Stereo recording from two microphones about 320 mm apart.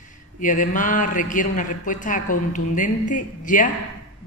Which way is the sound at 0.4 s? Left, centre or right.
Left.